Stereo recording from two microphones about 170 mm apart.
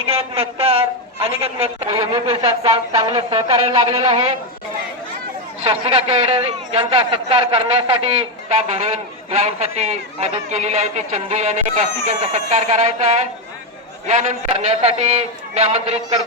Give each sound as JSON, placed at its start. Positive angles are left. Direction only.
{"t": 0.0, "sound": "a sound", "side_deg": -35}
{"t": 2.2, "sound": "a man's voice", "side_deg": -35}
{"t": 5.6, "sound": "a man's voice", "side_deg": -40}